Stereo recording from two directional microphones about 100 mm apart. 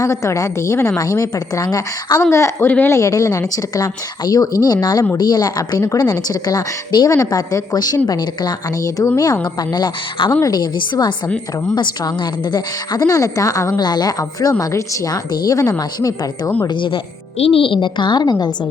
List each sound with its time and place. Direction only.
0.0 s speech: 30° left (ahead or behind)
2.3 s a woman's voice: 25° left (ahead or behind); by 16.5 s 40° left (ahead or behind)
16.6 s speech: 55° left (ahead or behind)
17.3 s a woman's voice: 75° left (ahead or behind); by 18.5 s 45° left (ahead or behind)